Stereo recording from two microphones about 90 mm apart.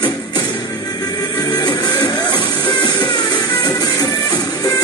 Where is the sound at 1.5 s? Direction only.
50° left (ahead or behind).